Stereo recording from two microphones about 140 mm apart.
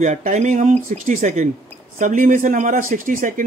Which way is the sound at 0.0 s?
55° right (ahead or behind).